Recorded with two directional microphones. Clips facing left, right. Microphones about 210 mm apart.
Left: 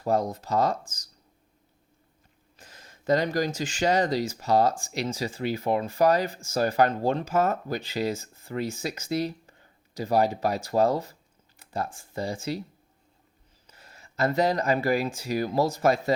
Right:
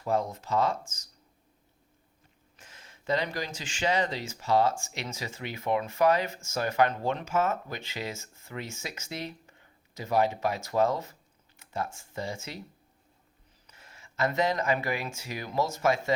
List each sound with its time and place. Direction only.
0.0 s speech: 40° left (ahead or behind)
2.6 s speech: 40° left (ahead or behind)
13.7 s speech: 35° left (ahead or behind)